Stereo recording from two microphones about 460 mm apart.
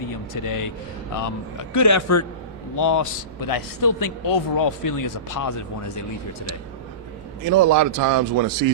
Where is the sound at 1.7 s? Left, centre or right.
Left.